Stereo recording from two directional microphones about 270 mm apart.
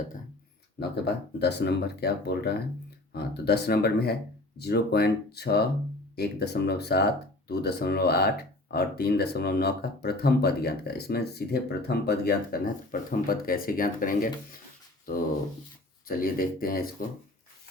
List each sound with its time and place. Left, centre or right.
0.8 s speech: left